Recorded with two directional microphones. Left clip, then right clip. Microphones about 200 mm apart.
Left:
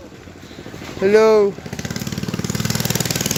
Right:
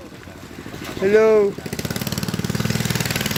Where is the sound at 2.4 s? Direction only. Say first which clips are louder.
Left 4 dB; 30° left (ahead or behind).